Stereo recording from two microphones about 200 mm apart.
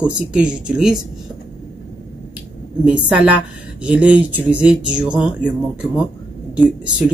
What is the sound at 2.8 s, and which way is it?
Speech, 5° right (ahead or behind).